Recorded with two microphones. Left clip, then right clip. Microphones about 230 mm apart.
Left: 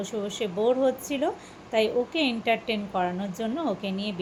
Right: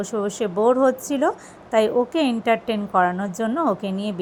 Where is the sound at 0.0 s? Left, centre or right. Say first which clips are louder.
Right 6 dB; right.